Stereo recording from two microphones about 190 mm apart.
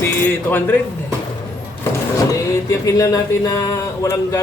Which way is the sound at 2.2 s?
15° left (ahead or behind).